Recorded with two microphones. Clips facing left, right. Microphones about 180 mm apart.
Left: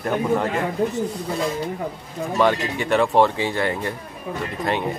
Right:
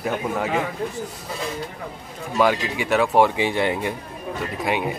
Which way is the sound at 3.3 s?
15° right (ahead or behind).